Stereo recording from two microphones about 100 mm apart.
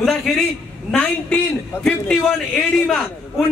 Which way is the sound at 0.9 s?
15° left (ahead or behind).